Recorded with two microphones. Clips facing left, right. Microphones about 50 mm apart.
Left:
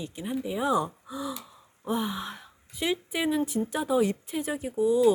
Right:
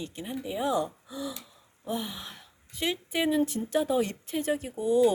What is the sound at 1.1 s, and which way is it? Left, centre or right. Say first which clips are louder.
Speech: left 2 dB; centre.